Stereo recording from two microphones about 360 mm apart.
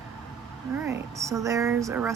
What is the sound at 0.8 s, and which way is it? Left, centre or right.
Speech, centre.